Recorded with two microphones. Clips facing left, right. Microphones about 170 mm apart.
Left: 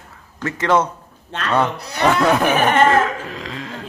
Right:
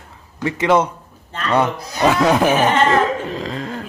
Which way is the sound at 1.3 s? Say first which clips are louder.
Even; 75° left (ahead or behind).